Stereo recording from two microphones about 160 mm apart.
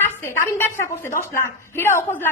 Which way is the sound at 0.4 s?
15° left (ahead or behind).